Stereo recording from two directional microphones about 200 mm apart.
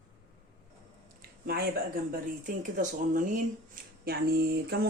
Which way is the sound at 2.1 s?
40° right (ahead or behind).